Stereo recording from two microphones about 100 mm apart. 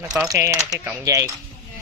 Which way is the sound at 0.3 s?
35° right (ahead or behind).